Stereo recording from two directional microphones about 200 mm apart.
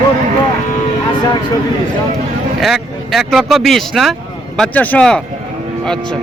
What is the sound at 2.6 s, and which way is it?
Speech, centre (ahead or behind).